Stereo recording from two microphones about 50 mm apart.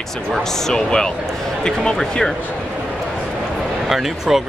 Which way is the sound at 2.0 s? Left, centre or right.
Centre.